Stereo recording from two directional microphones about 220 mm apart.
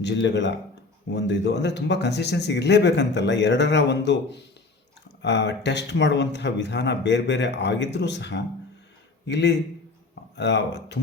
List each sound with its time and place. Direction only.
0.0 s speech: 55° left (ahead or behind)